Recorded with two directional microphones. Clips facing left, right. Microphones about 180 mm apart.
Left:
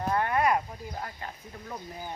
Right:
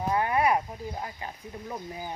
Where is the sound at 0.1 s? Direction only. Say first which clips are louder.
Right 1 dB; 10° right (ahead or behind).